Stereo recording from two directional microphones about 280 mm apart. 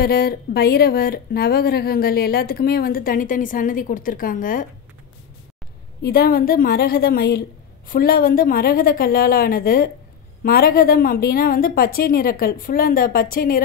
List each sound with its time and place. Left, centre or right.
0.0 s speech: left
6.0 s speech: left